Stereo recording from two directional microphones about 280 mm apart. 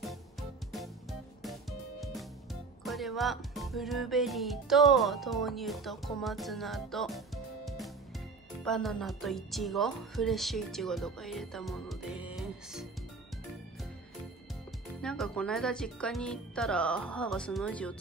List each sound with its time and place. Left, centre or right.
0.0 s music: centre
2.8 s speech: centre
15.0 s speech: centre